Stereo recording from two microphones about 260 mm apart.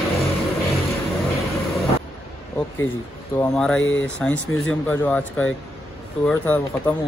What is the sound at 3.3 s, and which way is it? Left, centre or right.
Speech, centre.